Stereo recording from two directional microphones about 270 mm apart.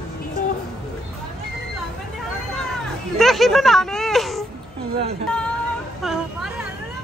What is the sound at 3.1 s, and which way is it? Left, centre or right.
Speech, centre.